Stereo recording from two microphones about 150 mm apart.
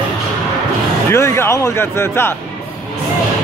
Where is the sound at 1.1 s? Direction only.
15° left (ahead or behind).